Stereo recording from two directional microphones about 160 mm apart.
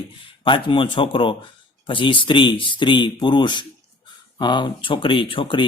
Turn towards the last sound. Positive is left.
turn(degrees=30)  # may be behind; listen again after turning